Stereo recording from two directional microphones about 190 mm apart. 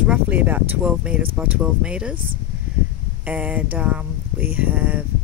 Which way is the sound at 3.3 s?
5° right (ahead or behind).